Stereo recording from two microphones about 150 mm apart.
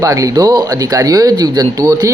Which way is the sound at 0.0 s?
20° right (ahead or behind).